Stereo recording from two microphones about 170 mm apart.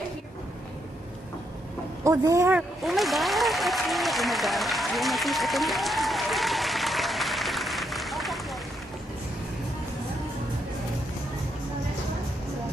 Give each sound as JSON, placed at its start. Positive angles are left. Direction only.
{"t": 2.0, "sound": "speech", "side_deg": -20}
{"t": 2.8, "sound": "applause", "side_deg": 0}